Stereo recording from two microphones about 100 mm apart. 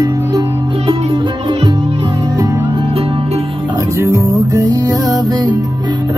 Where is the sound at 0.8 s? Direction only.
55° right (ahead or behind).